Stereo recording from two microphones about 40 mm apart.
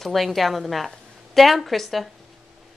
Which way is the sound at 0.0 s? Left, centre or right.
Centre.